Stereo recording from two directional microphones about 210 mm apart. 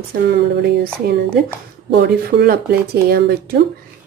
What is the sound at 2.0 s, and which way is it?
A woman's voice, 50° right (ahead or behind).